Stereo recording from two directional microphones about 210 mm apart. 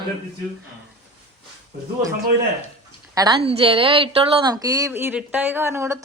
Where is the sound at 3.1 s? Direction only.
20° right (ahead or behind).